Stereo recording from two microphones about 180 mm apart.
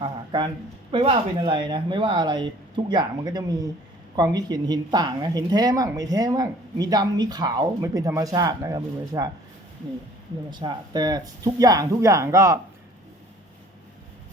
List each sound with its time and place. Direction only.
0.0 s speech: 25° right (ahead or behind)
10.5 s speech: 25° right (ahead or behind)